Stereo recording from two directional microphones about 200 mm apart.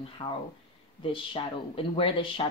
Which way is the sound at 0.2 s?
20° left (ahead or behind).